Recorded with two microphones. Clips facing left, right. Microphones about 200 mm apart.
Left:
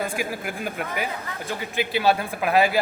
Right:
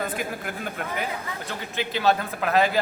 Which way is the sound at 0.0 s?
10° left (ahead or behind).